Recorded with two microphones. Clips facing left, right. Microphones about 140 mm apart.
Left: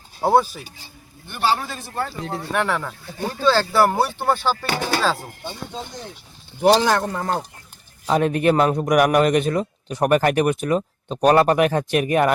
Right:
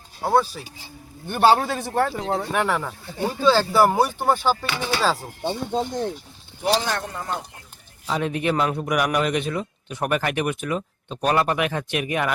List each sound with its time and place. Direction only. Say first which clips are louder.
0.2 s speech: left 3 dB; 15° left (ahead or behind)
1.3 s a man's voice: right 5 dB; 55° right (ahead or behind)
2.5 s speech: even; 5° right (ahead or behind)
4.6 s a man's voice: left 3 dB; 45° left (ahead or behind)
5.7 s speech: right 9 dB; 55° right (ahead or behind)
6.6 s speech: left 7 dB; 80° left
8.0 s a man's voice: left 6 dB; 50° left (ahead or behind)